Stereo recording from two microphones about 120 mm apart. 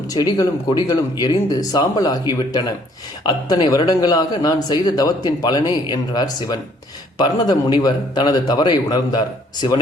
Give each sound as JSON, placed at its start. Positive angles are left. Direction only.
{"t": 0.1, "sound": "a man's voice", "side_deg": 35}